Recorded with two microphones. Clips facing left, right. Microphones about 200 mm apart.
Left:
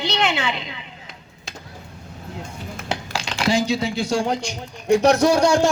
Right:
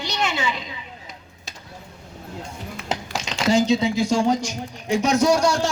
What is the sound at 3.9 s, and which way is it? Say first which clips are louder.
A man's voice: right 2 dB; 65° left (ahead or behind).